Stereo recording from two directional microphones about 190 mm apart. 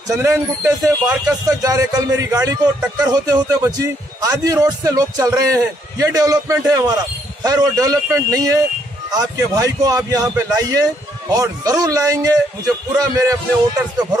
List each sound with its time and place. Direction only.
0.1 s a man's voice: 15° right (ahead or behind)